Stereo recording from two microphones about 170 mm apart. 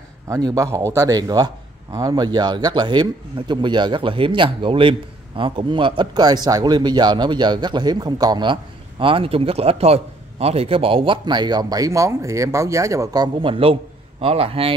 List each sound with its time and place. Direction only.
0.3 s a man's voice: 20° right (ahead or behind)